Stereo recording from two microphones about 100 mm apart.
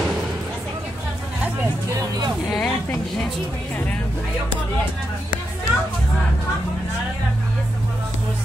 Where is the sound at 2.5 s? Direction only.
5° left (ahead or behind).